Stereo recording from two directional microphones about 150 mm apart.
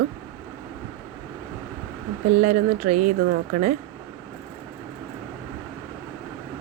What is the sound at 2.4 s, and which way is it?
Speech, 60° right (ahead or behind).